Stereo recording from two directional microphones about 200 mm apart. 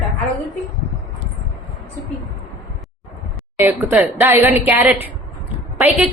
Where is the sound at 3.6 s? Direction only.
10° right (ahead or behind).